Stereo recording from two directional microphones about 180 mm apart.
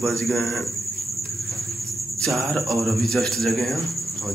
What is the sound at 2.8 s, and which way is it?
Music, centre (ahead or behind).